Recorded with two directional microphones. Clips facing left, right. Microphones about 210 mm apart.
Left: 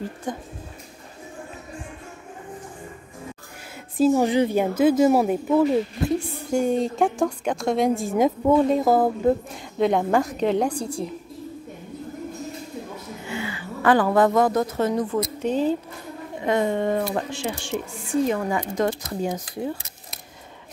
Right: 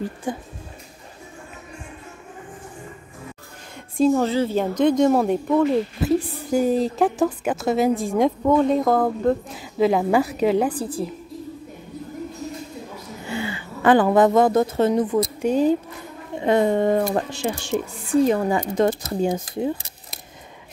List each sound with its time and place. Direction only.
0.3 s speech: 5° right (ahead or behind)
4.1 s a woman's voice: 15° left (ahead or behind); by 11.1 s 5° right (ahead or behind)
13.3 s speech: 30° right (ahead or behind)
15.3 s speech: 10° right (ahead or behind)
16.3 s speech: 30° right (ahead or behind)